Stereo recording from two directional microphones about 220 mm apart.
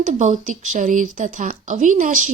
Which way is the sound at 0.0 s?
35° right (ahead or behind).